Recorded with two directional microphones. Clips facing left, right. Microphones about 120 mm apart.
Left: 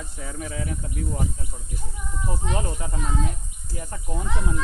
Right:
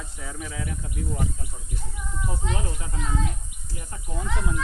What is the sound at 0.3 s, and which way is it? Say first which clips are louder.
Speech: left 3 dB; 40° left (ahead or behind).